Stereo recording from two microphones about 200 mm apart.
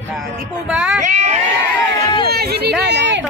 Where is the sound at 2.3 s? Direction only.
50° right (ahead or behind).